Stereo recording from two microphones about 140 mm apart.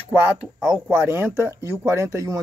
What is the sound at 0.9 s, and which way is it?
Speech, 15° right (ahead or behind).